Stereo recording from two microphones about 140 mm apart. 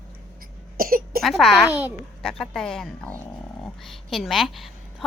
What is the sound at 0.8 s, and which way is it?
Cough, 90° right.